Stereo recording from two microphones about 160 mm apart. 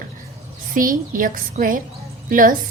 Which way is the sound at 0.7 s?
60° right (ahead or behind).